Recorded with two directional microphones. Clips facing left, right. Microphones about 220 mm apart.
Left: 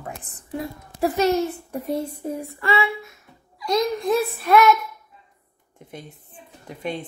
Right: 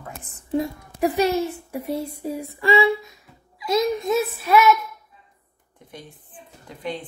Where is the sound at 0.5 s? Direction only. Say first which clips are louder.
Right 6 dB; 15° right (ahead or behind).